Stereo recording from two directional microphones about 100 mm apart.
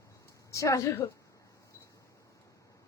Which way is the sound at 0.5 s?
30° left (ahead or behind).